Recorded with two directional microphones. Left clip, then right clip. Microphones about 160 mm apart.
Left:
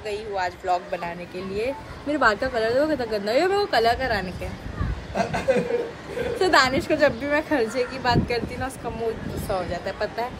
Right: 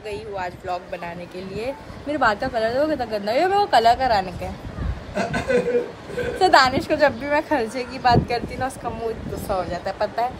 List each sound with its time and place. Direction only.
0.1 s a woman's voice: 10° right (ahead or behind)
5.1 s speech: 20° left (ahead or behind)
6.4 s a woman's voice: 10° right (ahead or behind)